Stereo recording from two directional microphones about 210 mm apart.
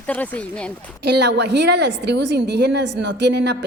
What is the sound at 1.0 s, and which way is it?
A woman's voice, 55° right (ahead or behind).